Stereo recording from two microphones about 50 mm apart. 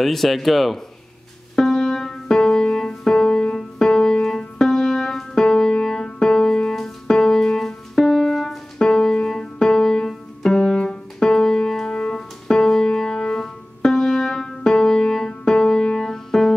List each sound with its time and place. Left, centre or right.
0.0 s speech: centre
1.5 s music: centre
11.9 s music: left
12.4 s music: centre